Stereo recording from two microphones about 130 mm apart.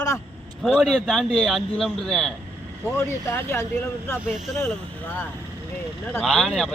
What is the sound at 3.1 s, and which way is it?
Speech, 20° left (ahead or behind).